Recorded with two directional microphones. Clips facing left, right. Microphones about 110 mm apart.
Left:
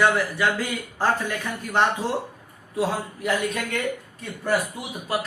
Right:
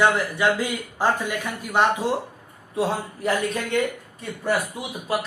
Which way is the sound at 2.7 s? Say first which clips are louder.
Right 1 dB; 35° right (ahead or behind).